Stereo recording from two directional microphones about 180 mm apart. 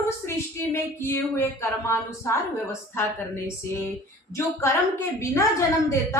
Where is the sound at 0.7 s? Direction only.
15° left (ahead or behind).